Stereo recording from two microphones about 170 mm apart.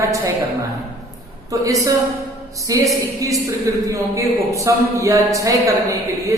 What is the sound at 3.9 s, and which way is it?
Speech, 20° right (ahead or behind).